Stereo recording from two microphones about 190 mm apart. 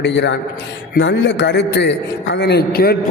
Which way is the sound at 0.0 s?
70° left (ahead or behind).